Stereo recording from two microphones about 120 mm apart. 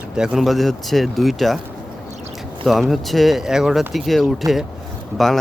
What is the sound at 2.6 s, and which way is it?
Speech, centre (ahead or behind).